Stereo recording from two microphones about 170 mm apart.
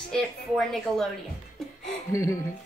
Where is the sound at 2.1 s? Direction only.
15° left (ahead or behind).